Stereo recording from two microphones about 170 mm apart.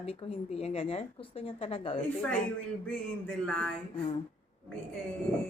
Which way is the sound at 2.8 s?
5° left (ahead or behind).